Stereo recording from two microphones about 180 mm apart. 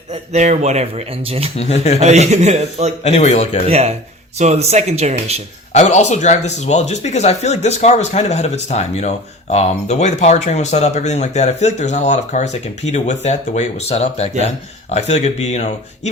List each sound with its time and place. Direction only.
0.1 s a man's voice: 40° right (ahead or behind)
1.5 s speech: 40° left (ahead or behind)
2.0 s a man's voice: 40° right (ahead or behind)
3.0 s speech: 40° left (ahead or behind)
3.7 s a man's voice: 35° right (ahead or behind)
5.7 s speech: 40° left (ahead or behind)